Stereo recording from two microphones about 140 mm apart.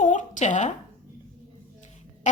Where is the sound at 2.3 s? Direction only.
60° left (ahead or behind).